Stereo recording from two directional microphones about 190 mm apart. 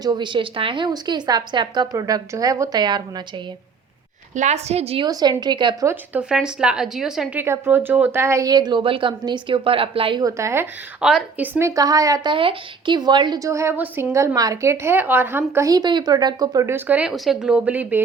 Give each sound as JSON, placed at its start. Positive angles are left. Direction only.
{"t": 0.0, "sound": "speech", "side_deg": -25}
{"t": 4.4, "sound": "a woman's voice", "side_deg": -35}
{"t": 5.0, "sound": "speech", "side_deg": -20}
{"t": 5.9, "sound": "a woman's voice", "side_deg": -5}
{"t": 7.4, "sound": "speech", "side_deg": -15}